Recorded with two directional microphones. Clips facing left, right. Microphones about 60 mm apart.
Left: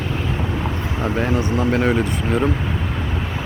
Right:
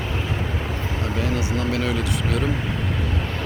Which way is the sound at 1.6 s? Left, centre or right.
Left.